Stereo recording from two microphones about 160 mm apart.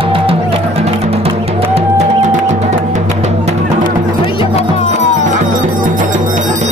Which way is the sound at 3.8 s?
35° left (ahead or behind).